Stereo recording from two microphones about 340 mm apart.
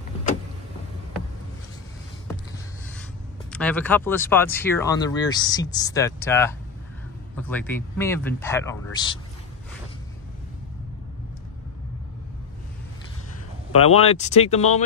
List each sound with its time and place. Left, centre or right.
3.6 s speech: centre
13.7 s speech: centre